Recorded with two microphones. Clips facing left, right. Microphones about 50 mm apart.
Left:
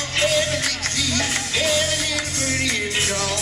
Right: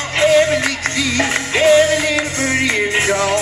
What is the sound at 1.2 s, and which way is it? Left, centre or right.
Music, right.